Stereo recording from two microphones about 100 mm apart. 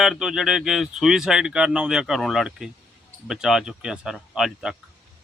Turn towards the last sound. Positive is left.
turn(degrees=-5)  # may be behind; listen again after turning